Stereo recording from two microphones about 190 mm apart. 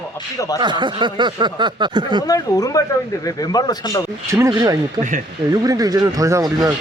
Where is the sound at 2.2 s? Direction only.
20° left (ahead or behind).